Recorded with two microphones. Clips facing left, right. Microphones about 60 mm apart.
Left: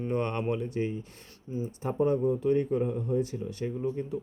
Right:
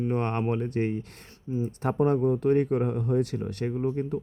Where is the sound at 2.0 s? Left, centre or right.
Right.